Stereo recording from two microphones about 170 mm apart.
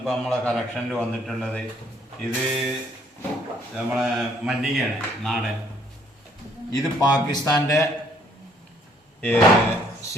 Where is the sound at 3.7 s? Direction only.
5° right (ahead or behind).